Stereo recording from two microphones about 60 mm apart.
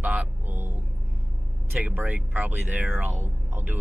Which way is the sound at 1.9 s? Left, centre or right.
Right.